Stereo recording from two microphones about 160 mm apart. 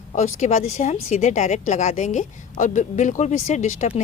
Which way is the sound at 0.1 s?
45° left (ahead or behind).